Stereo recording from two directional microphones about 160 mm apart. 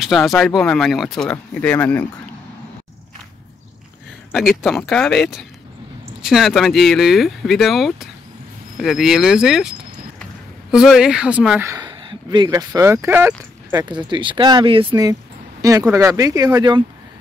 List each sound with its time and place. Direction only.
0.0 s speech: centre (ahead or behind)
4.6 s speech: centre (ahead or behind)
11.7 s speech: 25° right (ahead or behind)
13.8 s speech: 30° right (ahead or behind)